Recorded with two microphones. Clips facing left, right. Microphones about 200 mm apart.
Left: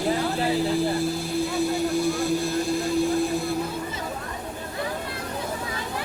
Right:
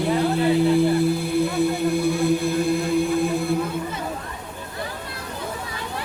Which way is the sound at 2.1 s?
55° right (ahead or behind).